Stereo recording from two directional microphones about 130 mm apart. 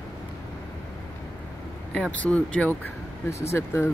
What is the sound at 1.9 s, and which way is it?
Speech, 10° left (ahead or behind).